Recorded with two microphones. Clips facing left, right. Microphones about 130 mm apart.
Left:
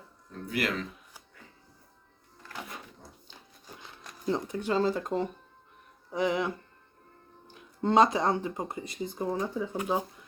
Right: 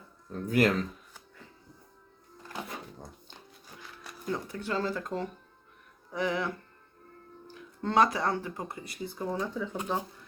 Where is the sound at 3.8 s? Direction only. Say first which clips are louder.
Right 4 dB; 20° left (ahead or behind).